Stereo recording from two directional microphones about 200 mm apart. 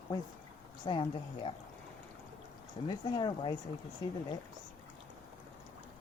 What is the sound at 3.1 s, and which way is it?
Speech, 25° left (ahead or behind).